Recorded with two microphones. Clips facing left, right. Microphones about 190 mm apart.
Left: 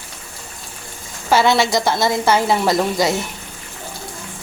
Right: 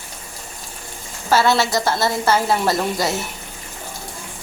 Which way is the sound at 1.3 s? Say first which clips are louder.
Left 2 dB; 15° left (ahead or behind).